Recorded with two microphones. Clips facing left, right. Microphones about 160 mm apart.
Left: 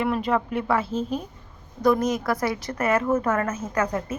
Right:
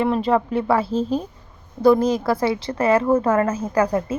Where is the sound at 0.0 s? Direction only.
30° right (ahead or behind).